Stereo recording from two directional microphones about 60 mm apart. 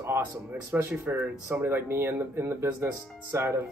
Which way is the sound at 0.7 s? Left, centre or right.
Right.